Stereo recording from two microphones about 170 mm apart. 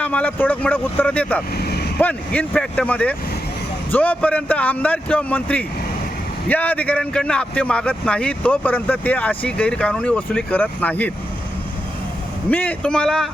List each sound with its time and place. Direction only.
0.0 s speech: 10° left (ahead or behind)
1.5 s vehicle: 70° left (ahead or behind)
2.0 s speech: 10° left (ahead or behind)
12.5 s a man's voice: 10° left (ahead or behind)